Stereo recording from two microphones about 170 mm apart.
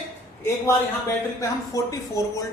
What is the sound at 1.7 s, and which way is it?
Speech, 20° left (ahead or behind).